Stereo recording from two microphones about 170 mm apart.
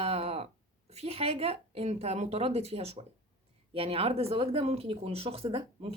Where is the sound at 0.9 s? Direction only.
35° right (ahead or behind).